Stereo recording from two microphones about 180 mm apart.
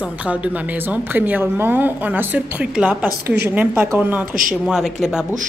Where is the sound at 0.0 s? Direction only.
5° right (ahead or behind).